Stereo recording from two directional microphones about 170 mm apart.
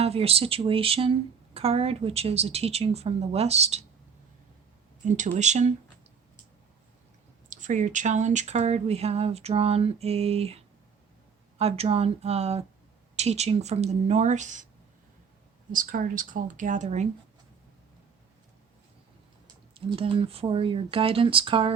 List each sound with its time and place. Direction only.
0.0 s speech: 35° right (ahead or behind)
5.0 s speech: 45° right (ahead or behind)
7.5 s speech: 45° right (ahead or behind)
15.7 s speech: 55° right (ahead or behind)
19.7 s speech: 35° right (ahead or behind)